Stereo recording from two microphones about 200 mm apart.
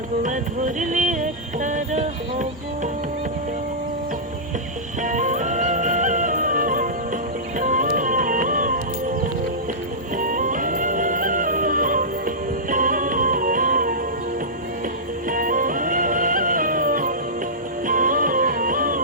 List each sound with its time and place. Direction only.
0.2 s music: 40° right (ahead or behind)
5.0 s music: 40° right (ahead or behind)
10.2 s music: 40° right (ahead or behind)
15.3 s music: 45° right (ahead or behind)